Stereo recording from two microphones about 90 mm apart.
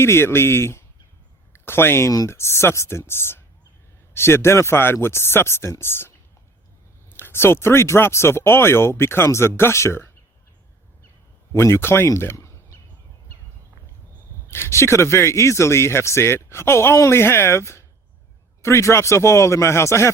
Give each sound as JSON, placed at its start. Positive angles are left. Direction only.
{"t": 0.0, "sound": "speech", "side_deg": 30}
{"t": 7.2, "sound": "speech", "side_deg": 25}
{"t": 11.5, "sound": "speech", "side_deg": 30}
{"t": 14.5, "sound": "speech", "side_deg": 30}